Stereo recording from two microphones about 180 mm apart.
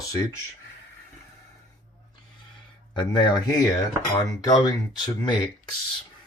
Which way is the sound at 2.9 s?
25° left (ahead or behind).